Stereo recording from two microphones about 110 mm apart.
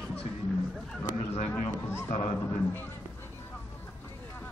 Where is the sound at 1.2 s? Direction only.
70° left (ahead or behind).